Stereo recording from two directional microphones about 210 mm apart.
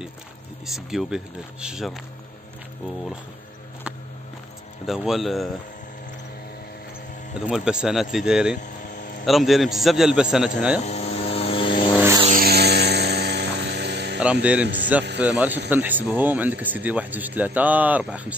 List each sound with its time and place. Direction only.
0.7 s speech: centre (ahead or behind)
4.8 s speech: centre (ahead or behind)
7.3 s speech: 5° right (ahead or behind)
8.5 s vehicle: 40° left (ahead or behind)
9.2 s speech: centre (ahead or behind)
10.9 s vehicle: 30° left (ahead or behind)
12.3 s music: 45° right (ahead or behind)
14.2 s speech: 5° right (ahead or behind)